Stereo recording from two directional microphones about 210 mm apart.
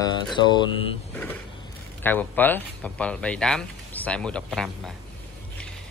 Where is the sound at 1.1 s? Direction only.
10° left (ahead or behind).